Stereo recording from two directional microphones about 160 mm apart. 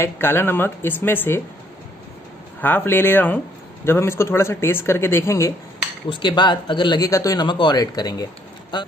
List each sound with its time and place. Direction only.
0.0 s speech: 15° left (ahead or behind)
2.6 s speech: 10° left (ahead or behind)
6.0 s speech: 30° left (ahead or behind)